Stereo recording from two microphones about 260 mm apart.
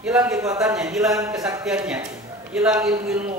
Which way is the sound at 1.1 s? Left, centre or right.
Centre.